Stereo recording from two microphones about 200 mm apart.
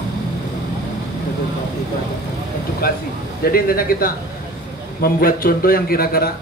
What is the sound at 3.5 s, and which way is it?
A man's voice, 45° left (ahead or behind).